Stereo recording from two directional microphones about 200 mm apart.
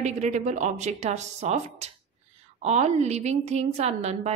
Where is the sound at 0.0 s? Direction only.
35° right (ahead or behind).